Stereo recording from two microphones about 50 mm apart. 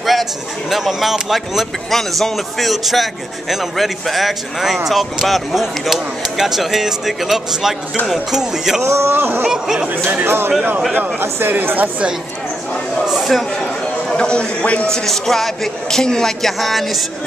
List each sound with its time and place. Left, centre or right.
0.0 s speech: centre
8.8 s speech: right
9.1 s speech: right
9.5 s speech: centre
10.2 s speech: right
13.0 s a sound: centre
14.0 s a man's voice: centre
14.9 s speech: centre